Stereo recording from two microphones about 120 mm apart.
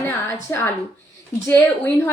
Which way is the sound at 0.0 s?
20° left (ahead or behind).